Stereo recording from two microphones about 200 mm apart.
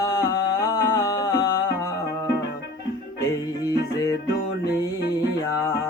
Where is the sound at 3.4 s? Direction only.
15° left (ahead or behind).